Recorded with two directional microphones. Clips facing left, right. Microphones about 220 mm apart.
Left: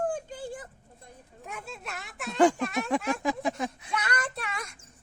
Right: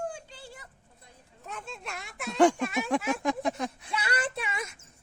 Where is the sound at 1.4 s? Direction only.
10° left (ahead or behind).